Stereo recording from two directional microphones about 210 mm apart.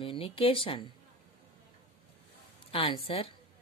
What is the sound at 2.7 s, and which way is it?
Speech, 25° left (ahead or behind).